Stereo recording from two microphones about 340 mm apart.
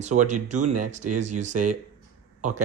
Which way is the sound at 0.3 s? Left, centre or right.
Right.